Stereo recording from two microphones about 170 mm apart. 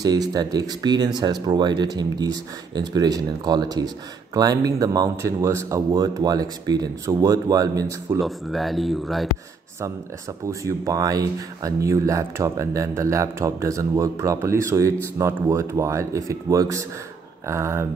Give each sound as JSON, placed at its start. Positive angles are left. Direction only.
{"t": 0.0, "sound": "speech", "side_deg": -25}
{"t": 8.2, "sound": "speech", "side_deg": 0}
{"t": 10.6, "sound": "speech", "side_deg": -20}